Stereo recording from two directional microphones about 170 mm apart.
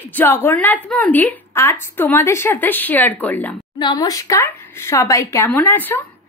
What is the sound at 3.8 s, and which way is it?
A woman's voice, 25° left (ahead or behind).